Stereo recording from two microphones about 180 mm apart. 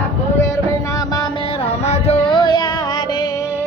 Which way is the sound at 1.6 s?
35° left (ahead or behind).